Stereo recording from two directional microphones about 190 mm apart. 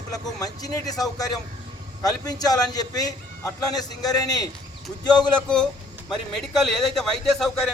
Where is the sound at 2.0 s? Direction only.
20° left (ahead or behind).